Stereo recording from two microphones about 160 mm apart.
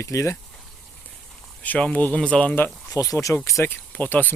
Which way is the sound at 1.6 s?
10° left (ahead or behind).